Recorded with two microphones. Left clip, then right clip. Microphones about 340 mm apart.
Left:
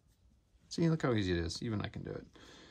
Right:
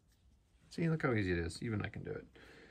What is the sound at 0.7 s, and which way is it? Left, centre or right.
Speech, centre.